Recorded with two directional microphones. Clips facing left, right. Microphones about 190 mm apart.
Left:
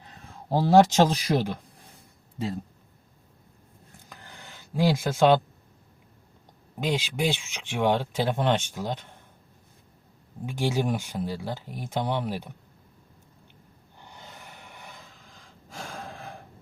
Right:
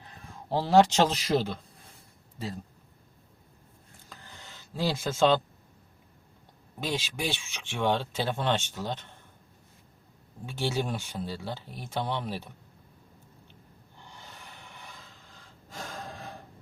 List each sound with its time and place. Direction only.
0.4 s speech: 15° left (ahead or behind)
4.1 s a sound: 15° left (ahead or behind)
6.7 s speech: 15° left (ahead or behind)
10.4 s speech: 15° left (ahead or behind)
14.0 s snort: 15° left (ahead or behind)